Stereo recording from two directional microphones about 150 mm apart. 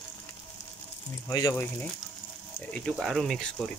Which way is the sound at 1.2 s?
20° left (ahead or behind).